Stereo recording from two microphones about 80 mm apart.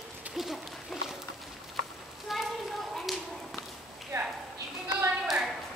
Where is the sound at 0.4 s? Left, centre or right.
Centre.